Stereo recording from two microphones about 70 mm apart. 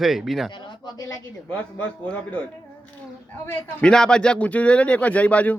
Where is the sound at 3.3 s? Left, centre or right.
Left.